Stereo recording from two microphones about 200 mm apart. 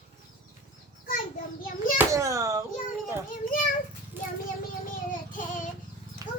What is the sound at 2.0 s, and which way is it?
Hands, 15° right (ahead or behind).